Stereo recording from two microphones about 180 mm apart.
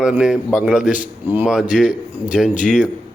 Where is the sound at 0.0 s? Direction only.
5° right (ahead or behind).